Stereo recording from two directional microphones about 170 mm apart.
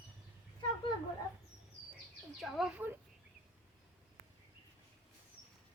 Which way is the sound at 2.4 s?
Centre (ahead or behind).